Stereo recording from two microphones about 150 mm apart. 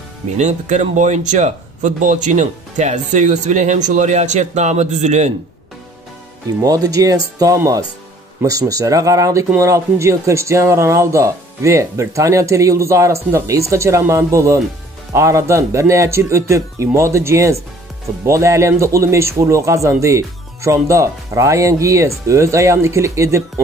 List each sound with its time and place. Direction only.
0.4 s speech: 50° right (ahead or behind)
6.6 s speech: 25° right (ahead or behind)